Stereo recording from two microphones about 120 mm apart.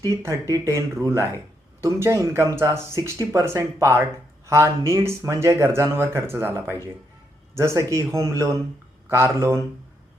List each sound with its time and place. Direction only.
0.0 s speech: 25° right (ahead or behind)